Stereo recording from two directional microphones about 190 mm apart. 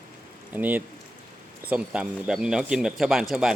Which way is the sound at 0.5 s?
10° right (ahead or behind).